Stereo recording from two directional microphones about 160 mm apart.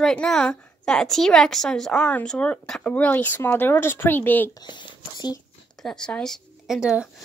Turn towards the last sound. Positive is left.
turn(degrees=-5)  # may be behind; listen again after turning